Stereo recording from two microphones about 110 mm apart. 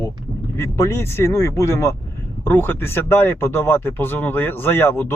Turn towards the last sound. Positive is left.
turn(degrees=20)  # may be behind; listen again after turning